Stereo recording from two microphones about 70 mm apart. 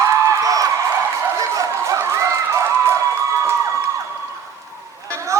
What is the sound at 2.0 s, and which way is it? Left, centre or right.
Run, right.